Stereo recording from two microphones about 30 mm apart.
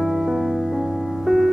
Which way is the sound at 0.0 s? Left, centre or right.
Centre.